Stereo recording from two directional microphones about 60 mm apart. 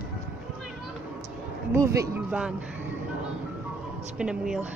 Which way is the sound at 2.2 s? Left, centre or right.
Right.